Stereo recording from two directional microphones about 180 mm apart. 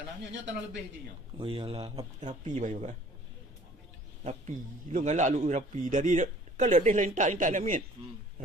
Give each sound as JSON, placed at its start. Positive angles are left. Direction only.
{"t": 1.4, "sound": "speech", "side_deg": -30}
{"t": 2.1, "sound": "speech", "side_deg": -40}
{"t": 4.2, "sound": "a man's voice", "side_deg": -40}